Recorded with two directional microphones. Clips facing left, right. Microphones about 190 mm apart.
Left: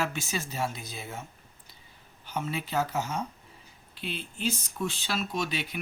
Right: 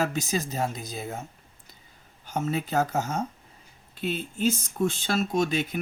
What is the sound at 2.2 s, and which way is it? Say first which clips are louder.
Speech: right 5 dB; 45° right (ahead or behind).